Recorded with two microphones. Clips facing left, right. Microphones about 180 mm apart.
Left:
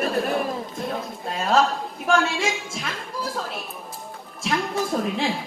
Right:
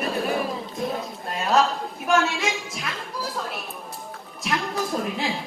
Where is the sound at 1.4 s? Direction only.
Centre (ahead or behind).